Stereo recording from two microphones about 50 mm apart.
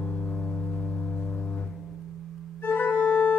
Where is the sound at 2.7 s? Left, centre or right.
Left.